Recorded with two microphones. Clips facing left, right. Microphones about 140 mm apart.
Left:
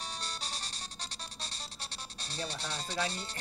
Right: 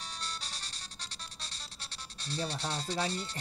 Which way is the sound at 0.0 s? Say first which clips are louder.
Left 2 dB; 20° left (ahead or behind).